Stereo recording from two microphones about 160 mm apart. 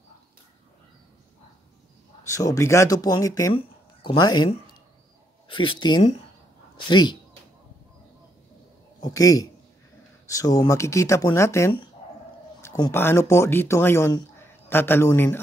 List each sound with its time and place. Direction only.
2.2 s speech: 20° left (ahead or behind)
3.5 s speech: 30° left (ahead or behind)
5.5 s speech: 30° left (ahead or behind)
9.0 s speech: 20° left (ahead or behind)
12.6 s a sound: 25° left (ahead or behind)
12.9 s speech: 15° left (ahead or behind)